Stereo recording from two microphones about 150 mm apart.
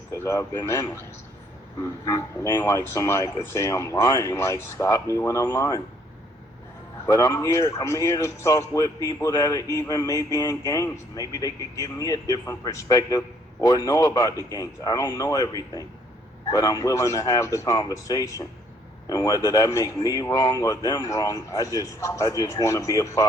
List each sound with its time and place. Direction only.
0.1 s speech: 20° left (ahead or behind)
2.0 s speech: 20° left (ahead or behind)
7.0 s speech: 25° left (ahead or behind)